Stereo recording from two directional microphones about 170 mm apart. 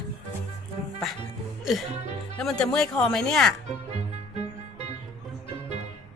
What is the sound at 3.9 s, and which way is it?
Music, 40° right (ahead or behind).